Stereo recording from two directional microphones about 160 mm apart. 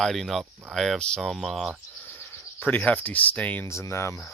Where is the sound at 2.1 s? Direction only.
15° left (ahead or behind).